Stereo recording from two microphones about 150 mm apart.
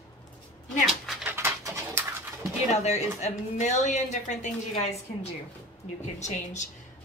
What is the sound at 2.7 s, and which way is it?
A woman's voice, 50° left (ahead or behind).